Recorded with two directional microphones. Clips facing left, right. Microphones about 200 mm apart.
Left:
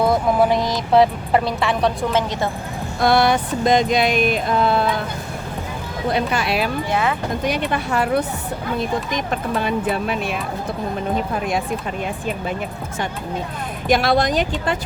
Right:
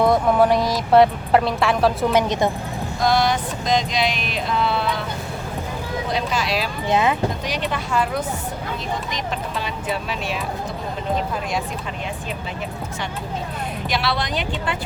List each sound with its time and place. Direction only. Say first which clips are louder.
0.0 s speech: even; centre (ahead or behind)
2.1 s speech: right 2 dB; 15° right (ahead or behind)
3.0 s a sound: left 3 dB; 60° left (ahead or behind)
6.1 s speech: left 5 dB; 60° left (ahead or behind)
6.9 s speech: right 4 dB; 20° right (ahead or behind)
7.4 s speech: left 4 dB; 55° left (ahead or behind)
8.8 s speech: left 5 dB; 50° left (ahead or behind)
13.8 s a sound: left 8 dB; 50° left (ahead or behind)